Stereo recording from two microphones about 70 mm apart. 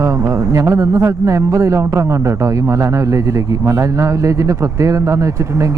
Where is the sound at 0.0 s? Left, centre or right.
Right.